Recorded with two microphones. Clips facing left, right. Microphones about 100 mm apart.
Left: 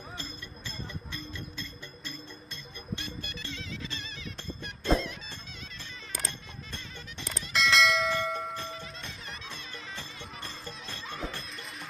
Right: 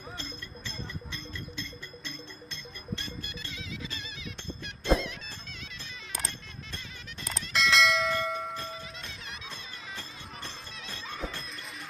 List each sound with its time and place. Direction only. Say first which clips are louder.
0.2 s music: right 1 dB; 5° left (ahead or behind)
3.5 s music: right 2 dB; 10° right (ahead or behind)
7.2 s church bell: even; centre (ahead or behind)